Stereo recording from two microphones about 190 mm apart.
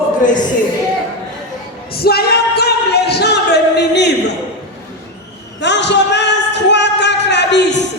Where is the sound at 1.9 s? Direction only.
55° left (ahead or behind).